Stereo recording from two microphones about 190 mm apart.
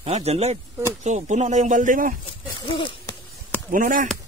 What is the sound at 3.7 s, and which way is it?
Fowl, 45° right (ahead or behind).